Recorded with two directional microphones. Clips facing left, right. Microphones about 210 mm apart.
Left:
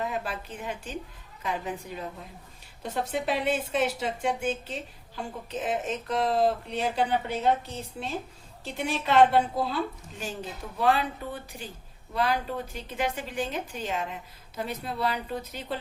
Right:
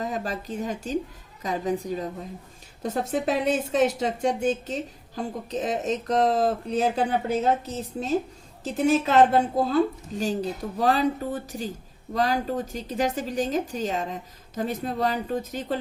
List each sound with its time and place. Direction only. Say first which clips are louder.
0.0 s a woman's voice: right 3 dB; 40° right (ahead or behind)
8.7 s a woman's voice: right 5 dB; 45° right (ahead or behind)